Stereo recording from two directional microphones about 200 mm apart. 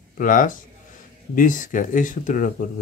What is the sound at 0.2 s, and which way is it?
Speech, 40° left (ahead or behind).